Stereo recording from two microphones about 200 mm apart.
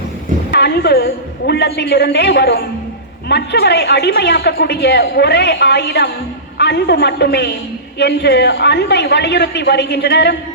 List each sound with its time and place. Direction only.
0.5 s a woman's voice: 50° left (ahead or behind)